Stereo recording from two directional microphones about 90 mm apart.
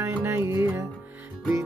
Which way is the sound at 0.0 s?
25° right (ahead or behind).